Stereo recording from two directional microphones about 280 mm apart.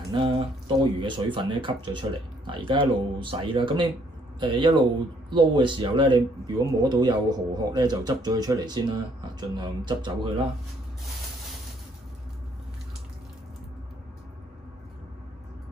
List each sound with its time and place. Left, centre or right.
0.1 s speech: centre